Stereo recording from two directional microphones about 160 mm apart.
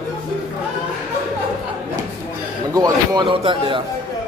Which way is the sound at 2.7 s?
25° right (ahead or behind).